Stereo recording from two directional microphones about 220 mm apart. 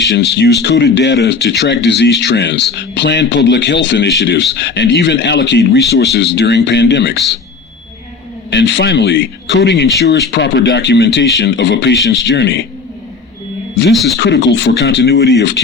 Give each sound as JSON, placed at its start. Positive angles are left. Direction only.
{"t": 0.0, "sound": "speech", "side_deg": 50}
{"t": 8.4, "sound": "speech", "side_deg": 50}
{"t": 13.9, "sound": "speech", "side_deg": 0}
{"t": 14.2, "sound": "speech", "side_deg": 55}